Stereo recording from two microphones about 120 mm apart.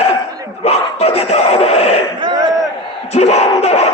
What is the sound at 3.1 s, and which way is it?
Crowd, 65° left (ahead or behind).